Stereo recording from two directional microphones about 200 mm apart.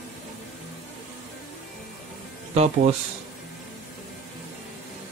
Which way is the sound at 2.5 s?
35° right (ahead or behind).